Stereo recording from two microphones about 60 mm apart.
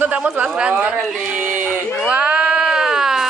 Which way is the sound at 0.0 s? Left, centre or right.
Right.